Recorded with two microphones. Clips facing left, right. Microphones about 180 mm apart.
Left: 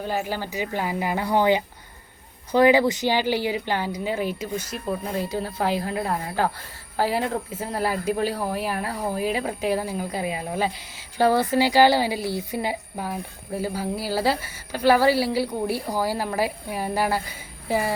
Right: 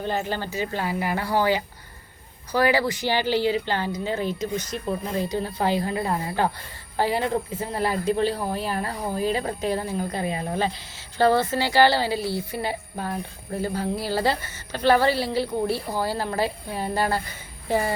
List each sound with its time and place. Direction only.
0.0 s a woman's voice: 10° left (ahead or behind)